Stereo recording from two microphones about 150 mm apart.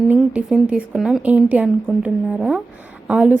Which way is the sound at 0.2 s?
5° right (ahead or behind).